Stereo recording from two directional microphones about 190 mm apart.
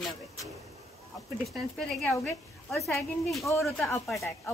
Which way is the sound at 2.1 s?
15° left (ahead or behind).